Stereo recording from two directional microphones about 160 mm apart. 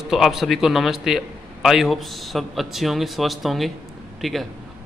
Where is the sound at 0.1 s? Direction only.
Centre (ahead or behind).